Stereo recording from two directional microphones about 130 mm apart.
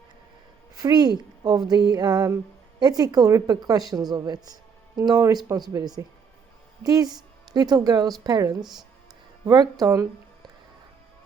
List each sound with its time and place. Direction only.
0.8 s a woman's voice: 30° right (ahead or behind)
1.7 s music: 30° right (ahead or behind)
2.8 s a woman's voice: 30° right (ahead or behind)
4.9 s music: 30° right (ahead or behind)
5.7 s a woman's voice: 30° right (ahead or behind)
8.6 s speech: centre (ahead or behind)
9.5 s music: 30° right (ahead or behind)